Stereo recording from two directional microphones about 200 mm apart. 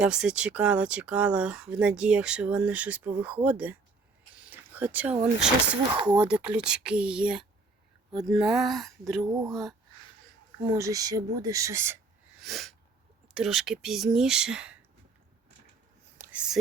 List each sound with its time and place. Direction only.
0.0 s speech: 5° right (ahead or behind)
9.2 s speech: 15° right (ahead or behind)
9.5 s speech: centre (ahead or behind)
10.6 s speech: 15° right (ahead or behind)
12.4 s sneeze: centre (ahead or behind)
13.2 s speech: centre (ahead or behind)
16.1 s whispering: 10° right (ahead or behind)